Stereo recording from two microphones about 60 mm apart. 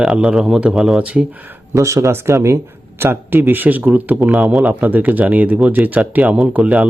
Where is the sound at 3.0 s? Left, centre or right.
Right.